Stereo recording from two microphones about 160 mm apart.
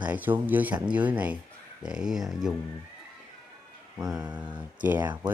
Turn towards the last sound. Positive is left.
turn(degrees=-10)  # may be behind; listen again after turning